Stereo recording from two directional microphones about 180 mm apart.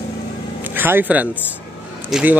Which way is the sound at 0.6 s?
10° right (ahead or behind).